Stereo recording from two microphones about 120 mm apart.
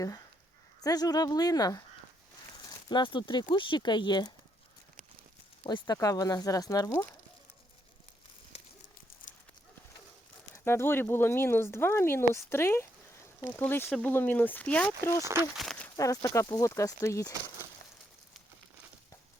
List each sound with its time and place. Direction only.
0.8 s speech: 30° left (ahead or behind)
5.6 s speech: 35° left (ahead or behind)
10.5 s speech: 20° left (ahead or behind)
15.2 s speech: 25° right (ahead or behind)
15.5 s a sound: centre (ahead or behind)
16.0 s speech: 25° left (ahead or behind)